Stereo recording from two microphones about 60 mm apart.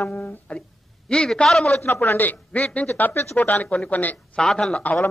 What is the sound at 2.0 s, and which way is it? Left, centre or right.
A man's voice, left.